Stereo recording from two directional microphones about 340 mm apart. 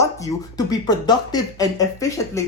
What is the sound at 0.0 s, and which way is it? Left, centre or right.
Speech, centre.